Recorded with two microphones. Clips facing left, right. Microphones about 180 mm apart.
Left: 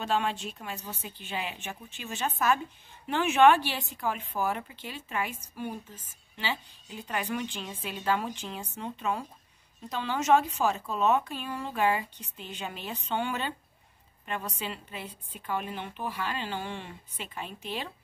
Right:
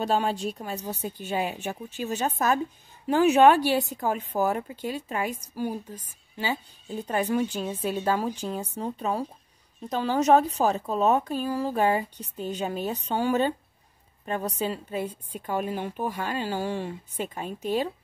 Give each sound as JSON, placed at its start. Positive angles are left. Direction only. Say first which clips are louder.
{"t": 0.0, "sound": "a woman's voice", "louder": "right 4 dB", "side_deg": -35}